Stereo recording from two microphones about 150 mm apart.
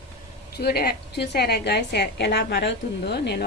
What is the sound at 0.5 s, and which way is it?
A woman's voice, 90° left.